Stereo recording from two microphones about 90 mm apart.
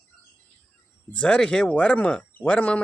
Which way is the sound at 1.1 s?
10° left (ahead or behind).